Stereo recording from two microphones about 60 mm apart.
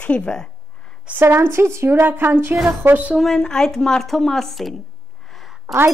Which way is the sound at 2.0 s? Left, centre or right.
Right.